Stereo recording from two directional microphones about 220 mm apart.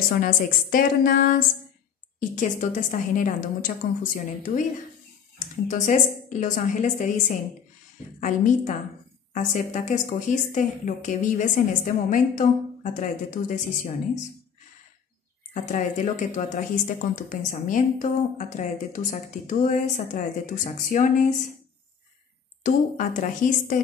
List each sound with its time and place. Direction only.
0.1 s a woman's voice: 40° left (ahead or behind)
9.3 s a woman's voice: 35° left (ahead or behind)
15.5 s a woman's voice: 35° left (ahead or behind)
22.6 s a woman's voice: 40° left (ahead or behind)